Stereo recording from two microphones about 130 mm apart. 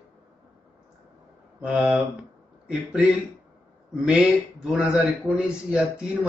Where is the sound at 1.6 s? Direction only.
5° right (ahead or behind).